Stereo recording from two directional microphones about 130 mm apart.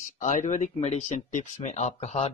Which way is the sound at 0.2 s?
70° left (ahead or behind).